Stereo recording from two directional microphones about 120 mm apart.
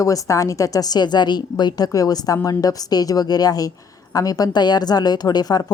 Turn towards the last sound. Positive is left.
turn(degrees=35)  # may be behind; listen again after turning